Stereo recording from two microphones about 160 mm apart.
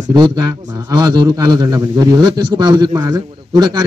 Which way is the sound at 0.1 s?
25° right (ahead or behind).